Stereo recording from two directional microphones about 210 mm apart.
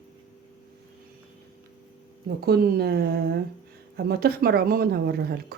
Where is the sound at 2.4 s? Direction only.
50° right (ahead or behind).